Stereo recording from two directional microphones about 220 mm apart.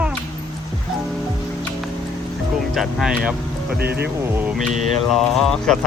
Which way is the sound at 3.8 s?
45° right (ahead or behind).